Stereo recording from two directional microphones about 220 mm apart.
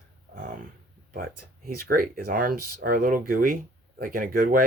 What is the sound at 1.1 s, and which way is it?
Speech, 45° right (ahead or behind).